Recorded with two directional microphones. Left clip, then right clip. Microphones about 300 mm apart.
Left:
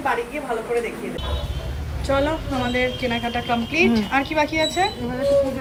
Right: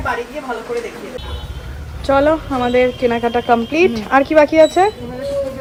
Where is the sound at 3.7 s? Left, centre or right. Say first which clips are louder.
Right 4 dB; centre.